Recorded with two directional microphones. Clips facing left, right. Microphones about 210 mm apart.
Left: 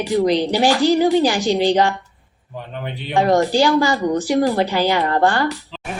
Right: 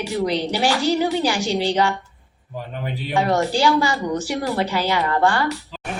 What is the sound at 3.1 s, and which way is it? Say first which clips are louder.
A woman's voice: left 4 dB; 35° left (ahead or behind).